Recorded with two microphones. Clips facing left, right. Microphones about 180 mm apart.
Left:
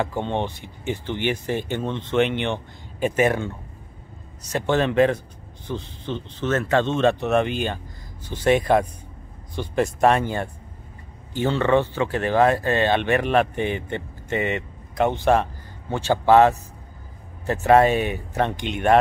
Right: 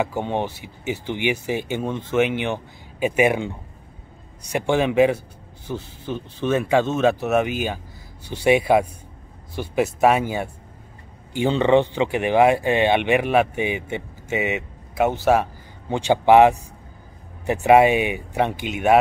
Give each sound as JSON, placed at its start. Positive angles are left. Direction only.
{"t": 0.0, "sound": "speech", "side_deg": -10}